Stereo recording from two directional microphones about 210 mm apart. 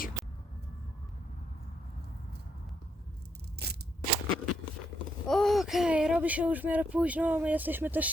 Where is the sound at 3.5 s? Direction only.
50° right (ahead or behind).